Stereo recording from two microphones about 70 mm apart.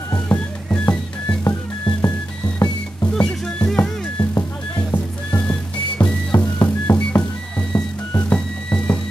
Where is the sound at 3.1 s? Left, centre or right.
Centre.